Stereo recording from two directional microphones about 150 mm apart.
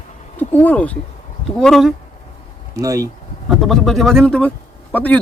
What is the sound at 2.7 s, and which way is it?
Speech, 20° right (ahead or behind).